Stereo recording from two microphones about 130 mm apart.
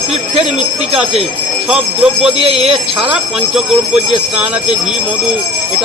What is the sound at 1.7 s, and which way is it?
Speech, 5° right (ahead or behind).